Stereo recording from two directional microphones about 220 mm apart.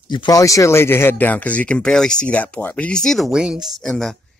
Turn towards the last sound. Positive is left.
turn(degrees=0)  # may be behind; listen again after turning